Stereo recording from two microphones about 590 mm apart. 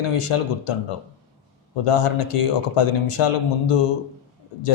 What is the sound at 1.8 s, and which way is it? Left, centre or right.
Speech, left.